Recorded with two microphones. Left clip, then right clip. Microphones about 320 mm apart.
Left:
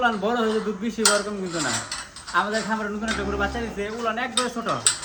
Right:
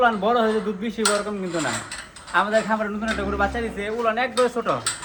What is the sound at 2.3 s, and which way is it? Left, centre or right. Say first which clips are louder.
A man's voice: right 3 dB; centre.